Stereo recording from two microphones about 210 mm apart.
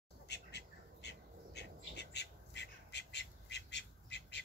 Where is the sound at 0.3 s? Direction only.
55° left (ahead or behind).